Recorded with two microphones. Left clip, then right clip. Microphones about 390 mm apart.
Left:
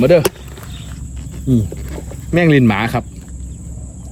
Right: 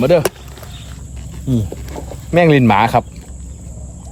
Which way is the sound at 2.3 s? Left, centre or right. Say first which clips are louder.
Right 2 dB; centre.